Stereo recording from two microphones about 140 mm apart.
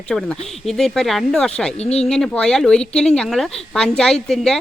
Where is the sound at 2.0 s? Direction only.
5° left (ahead or behind).